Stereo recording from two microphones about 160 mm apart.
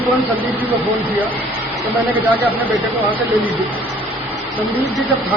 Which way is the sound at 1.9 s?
10° right (ahead or behind).